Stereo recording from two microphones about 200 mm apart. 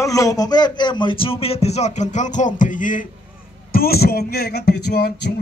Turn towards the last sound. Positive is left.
turn(degrees=55)  # may be behind; listen again after turning